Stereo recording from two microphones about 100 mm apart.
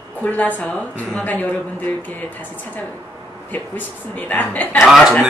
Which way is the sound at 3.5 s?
15° left (ahead or behind).